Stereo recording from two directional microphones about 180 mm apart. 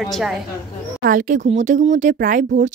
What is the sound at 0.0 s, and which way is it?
Speech, centre (ahead or behind).